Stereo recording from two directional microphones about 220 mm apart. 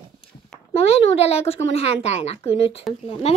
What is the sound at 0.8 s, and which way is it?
A woman's voice, 30° left (ahead or behind).